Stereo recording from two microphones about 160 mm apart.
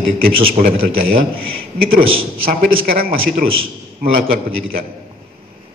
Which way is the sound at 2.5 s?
65° right (ahead or behind).